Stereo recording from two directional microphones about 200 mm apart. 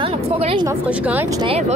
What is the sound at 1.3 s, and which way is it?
Speech, 25° right (ahead or behind).